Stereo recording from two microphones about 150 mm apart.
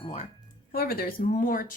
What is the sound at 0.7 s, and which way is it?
Speech, 90° left.